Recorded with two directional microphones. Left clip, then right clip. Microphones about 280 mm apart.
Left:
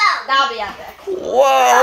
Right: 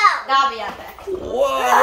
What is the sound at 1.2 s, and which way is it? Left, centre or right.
Speech, centre.